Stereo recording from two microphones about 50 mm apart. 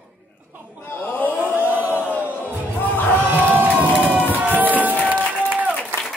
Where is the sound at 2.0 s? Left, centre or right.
Left.